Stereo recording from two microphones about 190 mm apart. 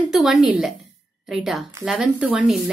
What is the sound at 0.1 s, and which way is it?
A woman's voice, centre (ahead or behind).